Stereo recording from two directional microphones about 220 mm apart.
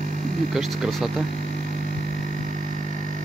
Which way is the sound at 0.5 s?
Centre (ahead or behind).